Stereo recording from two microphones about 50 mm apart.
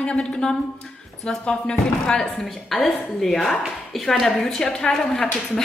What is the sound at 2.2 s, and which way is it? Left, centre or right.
A woman's voice, centre.